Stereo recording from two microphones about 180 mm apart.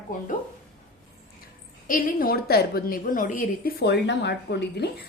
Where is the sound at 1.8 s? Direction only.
50° left (ahead or behind).